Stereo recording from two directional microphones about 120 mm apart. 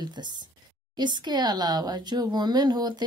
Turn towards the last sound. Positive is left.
turn(degrees=-35)  # may be behind; listen again after turning